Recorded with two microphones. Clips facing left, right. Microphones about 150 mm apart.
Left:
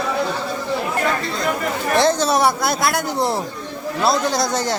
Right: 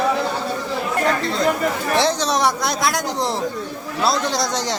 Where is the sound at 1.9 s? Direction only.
Centre (ahead or behind).